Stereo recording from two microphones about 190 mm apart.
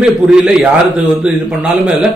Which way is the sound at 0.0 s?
5° right (ahead or behind).